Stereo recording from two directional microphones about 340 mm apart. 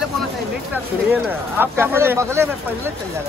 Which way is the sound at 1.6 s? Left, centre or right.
Centre.